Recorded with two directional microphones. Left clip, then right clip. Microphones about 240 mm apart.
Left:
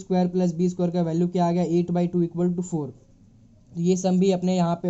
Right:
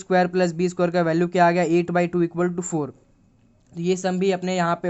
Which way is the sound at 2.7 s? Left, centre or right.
Right.